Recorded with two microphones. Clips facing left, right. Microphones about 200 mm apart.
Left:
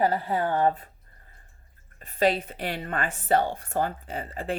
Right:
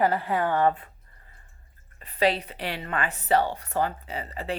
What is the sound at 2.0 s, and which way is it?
Speech, 45° left (ahead or behind).